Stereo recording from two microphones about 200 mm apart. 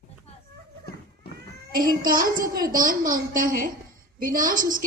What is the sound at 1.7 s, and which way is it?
A woman's voice, 45° right (ahead or behind).